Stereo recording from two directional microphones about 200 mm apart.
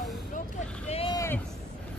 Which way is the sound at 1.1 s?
15° left (ahead or behind).